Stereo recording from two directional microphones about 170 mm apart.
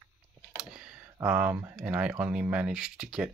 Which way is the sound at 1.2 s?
5° right (ahead or behind).